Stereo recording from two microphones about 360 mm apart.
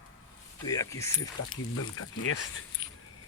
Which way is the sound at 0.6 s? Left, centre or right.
Centre.